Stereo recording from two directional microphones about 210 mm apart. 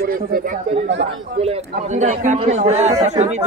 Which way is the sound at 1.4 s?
30° right (ahead or behind).